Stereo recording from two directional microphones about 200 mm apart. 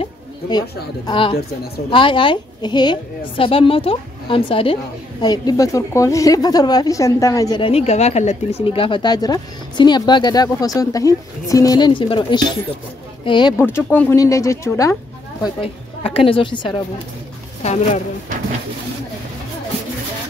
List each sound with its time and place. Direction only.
0.0 s a sound: 20° left (ahead or behind)
1.0 s speech: 25° left (ahead or behind)
13.6 s speech: 10° left (ahead or behind)
15.4 s speech: 25° left (ahead or behind)